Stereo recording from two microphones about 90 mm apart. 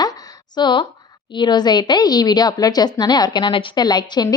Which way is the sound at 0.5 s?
60° left (ahead or behind).